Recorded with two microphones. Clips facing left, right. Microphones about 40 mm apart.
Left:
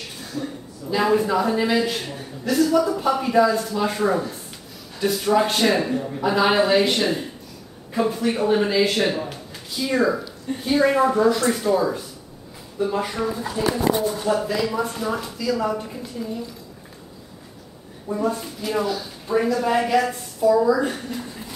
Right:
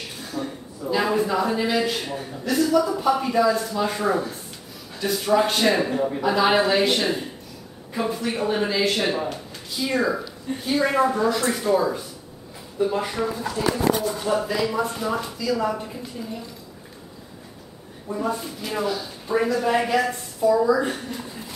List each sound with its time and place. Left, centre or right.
0.3 s a man's voice: centre
5.9 s a man's voice: centre
6.2 s a man's voice: centre
13.6 s speech: centre
14.2 s a man's voice: centre
18.2 s a man's voice: centre